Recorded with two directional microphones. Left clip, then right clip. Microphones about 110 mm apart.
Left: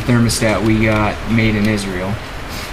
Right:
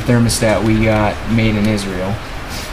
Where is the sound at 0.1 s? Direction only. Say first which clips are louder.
Right 2 dB; 15° right (ahead or behind).